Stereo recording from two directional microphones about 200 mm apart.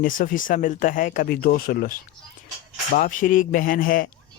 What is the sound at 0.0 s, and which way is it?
Speech, 45° left (ahead or behind).